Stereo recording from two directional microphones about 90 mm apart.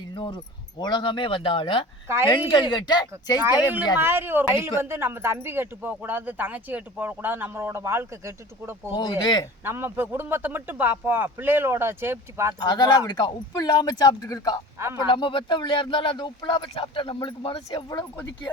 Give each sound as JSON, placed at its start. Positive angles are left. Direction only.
{"t": 0.3, "sound": "speech", "side_deg": 55}
{"t": 2.0, "sound": "speech", "side_deg": -30}
{"t": 2.3, "sound": "speech", "side_deg": 60}
{"t": 3.4, "sound": "speech", "side_deg": -20}
{"t": 9.0, "sound": "speech", "side_deg": 55}
{"t": 9.6, "sound": "speech", "side_deg": -25}
{"t": 12.5, "sound": "speech", "side_deg": 50}
{"t": 15.1, "sound": "speech", "side_deg": 65}